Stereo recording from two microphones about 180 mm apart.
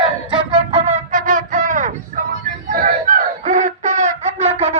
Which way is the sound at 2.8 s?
45° right (ahead or behind).